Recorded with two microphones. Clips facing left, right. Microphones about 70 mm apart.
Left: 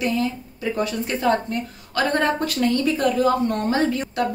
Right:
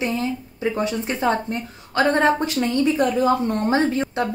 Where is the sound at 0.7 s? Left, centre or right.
Right.